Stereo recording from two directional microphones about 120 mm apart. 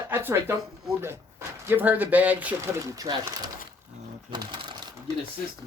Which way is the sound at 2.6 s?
30° right (ahead or behind).